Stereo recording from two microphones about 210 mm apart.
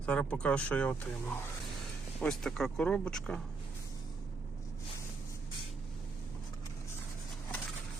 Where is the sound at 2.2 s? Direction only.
Centre (ahead or behind).